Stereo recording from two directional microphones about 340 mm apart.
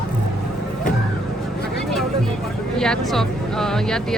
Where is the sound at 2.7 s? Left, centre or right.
Centre.